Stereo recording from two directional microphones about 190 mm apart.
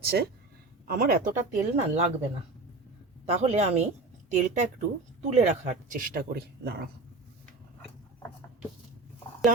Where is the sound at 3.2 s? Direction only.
35° right (ahead or behind).